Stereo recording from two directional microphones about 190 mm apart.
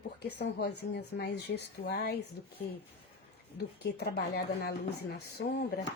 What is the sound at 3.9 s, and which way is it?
Speech, 55° left (ahead or behind).